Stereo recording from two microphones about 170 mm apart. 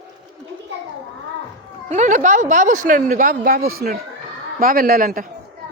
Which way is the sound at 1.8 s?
45° right (ahead or behind).